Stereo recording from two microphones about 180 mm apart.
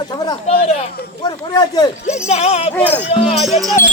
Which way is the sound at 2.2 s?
35° left (ahead or behind).